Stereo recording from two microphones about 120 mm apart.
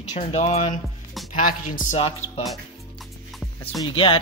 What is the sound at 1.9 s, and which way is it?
Music, 50° left (ahead or behind).